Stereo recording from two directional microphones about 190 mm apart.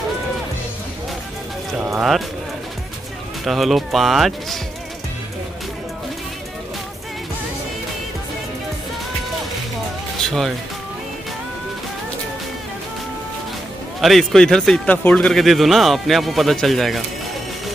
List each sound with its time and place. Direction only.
1.8 s a man's voice: 5° right (ahead or behind)
3.4 s a man's voice: centre (ahead or behind)
10.2 s speech: centre (ahead or behind)
14.0 s a man's voice: centre (ahead or behind)